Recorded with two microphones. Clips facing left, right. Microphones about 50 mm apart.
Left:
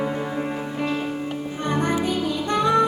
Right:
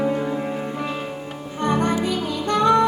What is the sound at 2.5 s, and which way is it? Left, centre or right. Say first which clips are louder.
Music: right 3 dB; centre.